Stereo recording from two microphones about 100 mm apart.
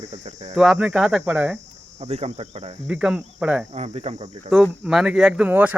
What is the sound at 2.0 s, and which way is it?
Cricket, 90° right.